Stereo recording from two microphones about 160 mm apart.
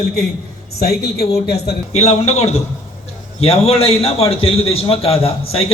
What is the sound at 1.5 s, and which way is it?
Speech, 90° left.